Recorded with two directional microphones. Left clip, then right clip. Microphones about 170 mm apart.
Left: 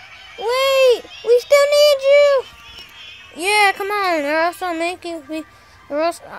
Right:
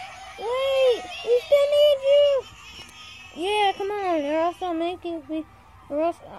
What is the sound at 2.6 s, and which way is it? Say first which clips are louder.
Music: left 5 dB; 50° right (ahead or behind).